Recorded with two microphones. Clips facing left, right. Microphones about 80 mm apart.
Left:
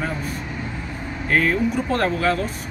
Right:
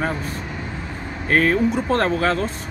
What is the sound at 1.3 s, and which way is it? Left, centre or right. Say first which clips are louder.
Speech: right 2 dB; right.